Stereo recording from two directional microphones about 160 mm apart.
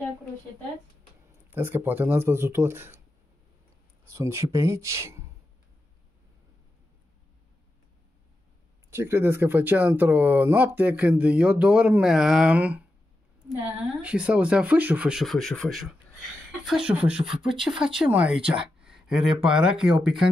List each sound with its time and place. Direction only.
1.5 s speech: 15° right (ahead or behind)
4.0 s speech: 15° right (ahead or behind)
8.9 s speech: 15° right (ahead or behind)
14.0 s speech: 5° right (ahead or behind)